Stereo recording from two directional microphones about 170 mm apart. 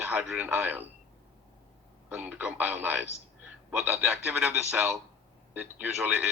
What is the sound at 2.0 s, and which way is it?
A man's voice, 5° right (ahead or behind).